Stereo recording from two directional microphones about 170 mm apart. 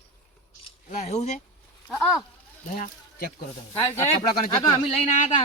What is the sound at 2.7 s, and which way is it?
Speech, 55° left (ahead or behind).